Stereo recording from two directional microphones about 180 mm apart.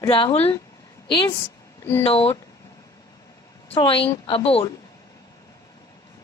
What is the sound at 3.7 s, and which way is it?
A woman's voice, 30° left (ahead or behind).